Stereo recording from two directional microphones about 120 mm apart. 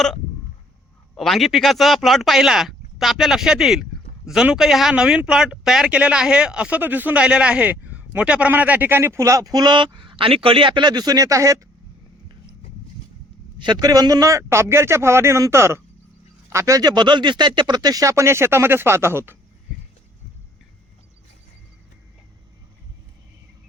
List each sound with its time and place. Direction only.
1.1 s speech: centre (ahead or behind); by 11.6 s 25° right (ahead or behind)
13.6 s speech: 35° right (ahead or behind); by 19.4 s 20° right (ahead or behind)